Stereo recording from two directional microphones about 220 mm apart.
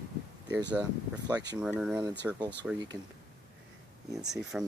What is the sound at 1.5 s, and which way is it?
Speech, 5° right (ahead or behind).